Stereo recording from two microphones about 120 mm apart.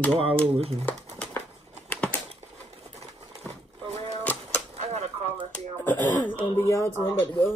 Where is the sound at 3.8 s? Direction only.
60° right (ahead or behind).